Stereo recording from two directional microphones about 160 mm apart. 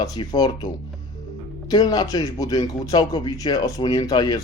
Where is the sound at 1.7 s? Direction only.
25° left (ahead or behind).